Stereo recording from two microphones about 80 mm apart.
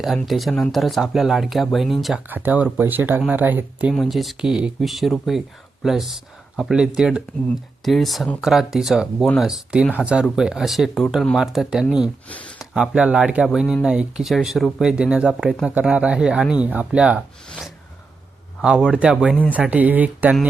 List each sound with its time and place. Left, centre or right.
0.3 s speech: centre
2.2 s speech: right
3.9 s speech: centre
9.5 s speech: centre
18.6 s speech: centre
19.7 s speech: centre